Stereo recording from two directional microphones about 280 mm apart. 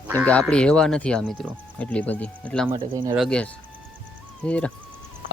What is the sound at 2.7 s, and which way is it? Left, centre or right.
Speech, centre.